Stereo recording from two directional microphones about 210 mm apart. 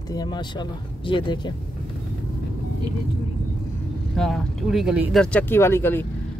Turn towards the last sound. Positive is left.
turn(degrees=10)  # may be behind; listen again after turning